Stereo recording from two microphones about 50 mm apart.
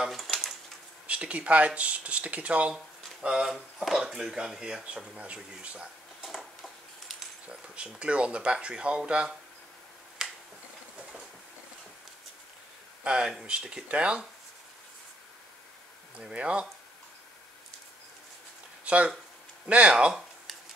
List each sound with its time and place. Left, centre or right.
0.1 s a sound: centre
1.0 s speech: right
2.7 s a sound: centre
4.0 s speech: centre
6.2 s a sound: centre
7.4 s speech: right
10.2 s finger snapping: centre
13.0 s speech: centre
16.3 s speech: right
18.9 s speech: right